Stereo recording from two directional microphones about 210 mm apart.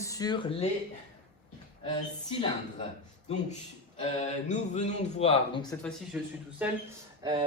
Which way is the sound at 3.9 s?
30° left (ahead or behind).